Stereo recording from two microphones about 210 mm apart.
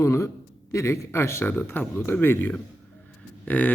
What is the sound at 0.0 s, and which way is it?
A man's voice, 15° left (ahead or behind).